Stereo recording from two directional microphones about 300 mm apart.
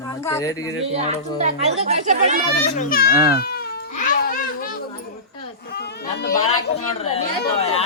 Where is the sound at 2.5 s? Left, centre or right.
Left.